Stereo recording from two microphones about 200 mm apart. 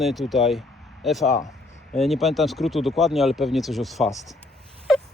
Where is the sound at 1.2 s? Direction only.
40° left (ahead or behind).